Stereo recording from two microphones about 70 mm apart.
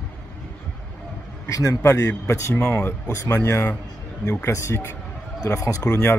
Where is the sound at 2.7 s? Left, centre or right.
Left.